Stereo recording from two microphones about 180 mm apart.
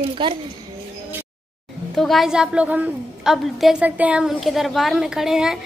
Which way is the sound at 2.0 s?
Centre (ahead or behind).